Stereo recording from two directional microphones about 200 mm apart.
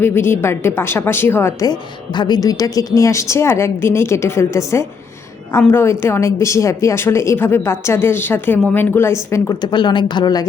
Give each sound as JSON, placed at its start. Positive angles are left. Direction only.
{"t": 0.0, "sound": "a woman's voice", "side_deg": 10}